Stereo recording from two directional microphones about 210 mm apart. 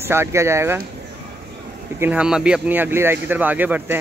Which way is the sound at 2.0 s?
5° right (ahead or behind).